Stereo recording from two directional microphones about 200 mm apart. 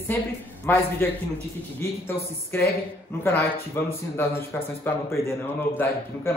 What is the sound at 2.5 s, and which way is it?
A man's voice, 10° left (ahead or behind).